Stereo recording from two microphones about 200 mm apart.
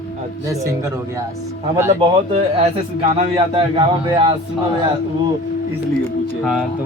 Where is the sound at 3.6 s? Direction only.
25° right (ahead or behind).